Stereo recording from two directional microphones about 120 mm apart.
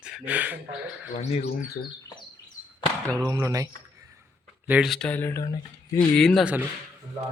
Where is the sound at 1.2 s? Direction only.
65° left (ahead or behind).